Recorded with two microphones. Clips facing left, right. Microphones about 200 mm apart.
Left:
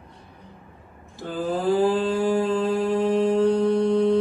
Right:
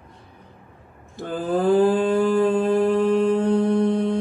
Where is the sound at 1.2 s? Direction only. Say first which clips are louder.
Right 3 dB; 55° right (ahead or behind).